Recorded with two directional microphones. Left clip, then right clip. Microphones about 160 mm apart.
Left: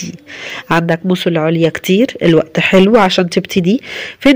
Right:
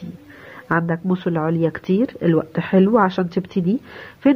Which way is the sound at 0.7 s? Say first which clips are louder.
Left 7 dB; 40° left (ahead or behind).